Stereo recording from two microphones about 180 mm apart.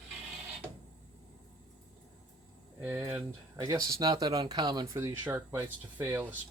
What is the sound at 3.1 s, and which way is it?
Speech, 20° right (ahead or behind).